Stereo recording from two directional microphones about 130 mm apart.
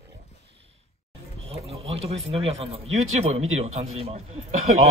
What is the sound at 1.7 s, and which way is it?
Speech, 50° right (ahead or behind).